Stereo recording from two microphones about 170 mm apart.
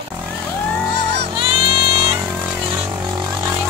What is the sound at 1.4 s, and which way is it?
Music, 30° right (ahead or behind).